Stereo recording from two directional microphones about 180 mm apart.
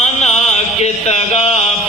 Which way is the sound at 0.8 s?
35° left (ahead or behind).